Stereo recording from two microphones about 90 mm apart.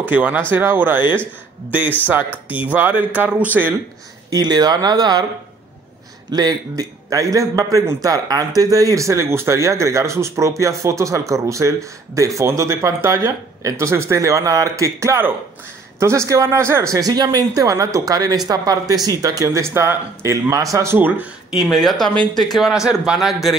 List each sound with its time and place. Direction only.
0.0 s speech: 20° right (ahead or behind)
4.3 s speech: 50° right (ahead or behind)
6.3 s a man's voice: 45° right (ahead or behind); by 16.9 s 30° right (ahead or behind)
16.9 s a man's voice: 45° right (ahead or behind)
21.5 s speech: centre (ahead or behind)